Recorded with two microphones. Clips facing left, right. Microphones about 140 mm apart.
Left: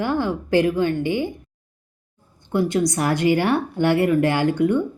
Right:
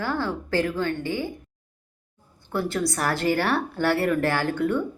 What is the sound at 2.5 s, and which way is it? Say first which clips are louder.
A woman's voice: left 6 dB; 20° left (ahead or behind).